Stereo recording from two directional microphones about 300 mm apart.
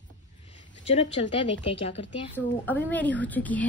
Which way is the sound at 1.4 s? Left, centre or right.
Centre.